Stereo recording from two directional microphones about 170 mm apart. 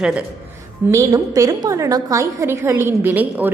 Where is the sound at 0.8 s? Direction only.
15° right (ahead or behind).